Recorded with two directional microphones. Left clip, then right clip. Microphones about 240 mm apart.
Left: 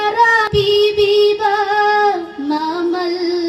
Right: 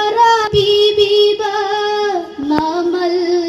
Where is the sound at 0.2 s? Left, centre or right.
Left.